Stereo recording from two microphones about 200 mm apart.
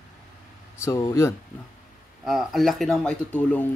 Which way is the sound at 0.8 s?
15° left (ahead or behind).